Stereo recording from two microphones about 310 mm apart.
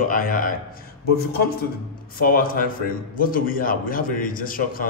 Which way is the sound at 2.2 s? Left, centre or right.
Left.